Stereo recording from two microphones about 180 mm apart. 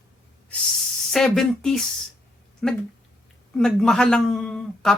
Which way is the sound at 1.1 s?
Centre (ahead or behind).